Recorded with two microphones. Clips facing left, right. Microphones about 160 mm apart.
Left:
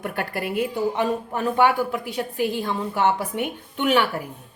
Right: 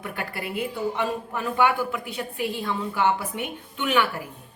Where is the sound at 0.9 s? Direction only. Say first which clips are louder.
Left 4 dB; 40° left (ahead or behind).